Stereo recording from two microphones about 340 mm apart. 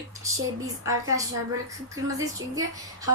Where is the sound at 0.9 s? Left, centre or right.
Centre.